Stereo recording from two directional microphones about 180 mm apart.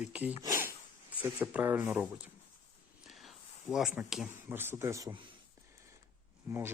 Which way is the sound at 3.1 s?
Centre (ahead or behind).